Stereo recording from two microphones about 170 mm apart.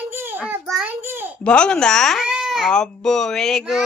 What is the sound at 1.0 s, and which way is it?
Babbling, 15° right (ahead or behind).